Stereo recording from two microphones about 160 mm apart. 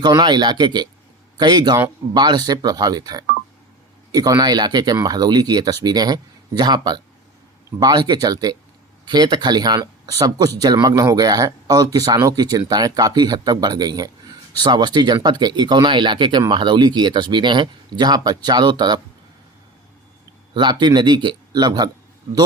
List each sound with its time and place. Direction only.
0.0 s speech: 25° right (ahead or behind)
20.5 s speech: 30° right (ahead or behind)